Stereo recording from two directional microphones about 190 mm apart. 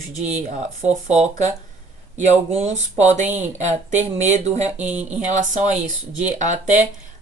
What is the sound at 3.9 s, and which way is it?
Speech, 35° right (ahead or behind).